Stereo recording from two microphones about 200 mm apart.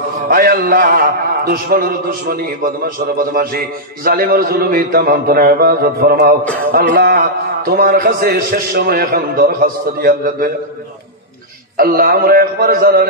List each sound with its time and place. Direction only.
0.3 s a man's voice: 50° right (ahead or behind)
6.4 s music: 5° left (ahead or behind)
6.7 s a man's voice: 50° right (ahead or behind)
11.7 s a man's voice: 45° right (ahead or behind)